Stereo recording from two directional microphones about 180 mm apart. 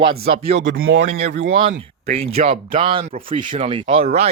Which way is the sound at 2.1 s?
35° right (ahead or behind).